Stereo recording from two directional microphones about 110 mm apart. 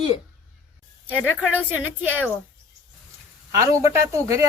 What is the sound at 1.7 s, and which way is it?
Speech, 15° right (ahead or behind).